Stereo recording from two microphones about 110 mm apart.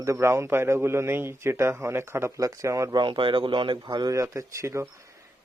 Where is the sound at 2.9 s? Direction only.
45° right (ahead or behind).